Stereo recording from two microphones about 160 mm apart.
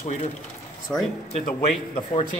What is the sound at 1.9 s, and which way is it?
Speech, 35° left (ahead or behind).